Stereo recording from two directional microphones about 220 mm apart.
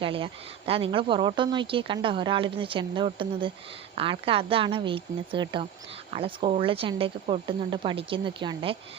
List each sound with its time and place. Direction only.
0.0 s a woman's voice: 25° right (ahead or behind)